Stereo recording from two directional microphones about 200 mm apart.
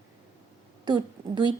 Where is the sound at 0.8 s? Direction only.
20° right (ahead or behind).